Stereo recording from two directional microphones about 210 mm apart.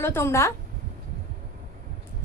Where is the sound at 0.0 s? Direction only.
10° left (ahead or behind).